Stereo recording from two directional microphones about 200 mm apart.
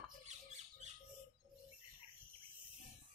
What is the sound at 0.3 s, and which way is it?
Rodents, 35° right (ahead or behind).